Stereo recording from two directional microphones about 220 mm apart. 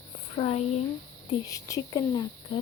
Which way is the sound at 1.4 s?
15° left (ahead or behind).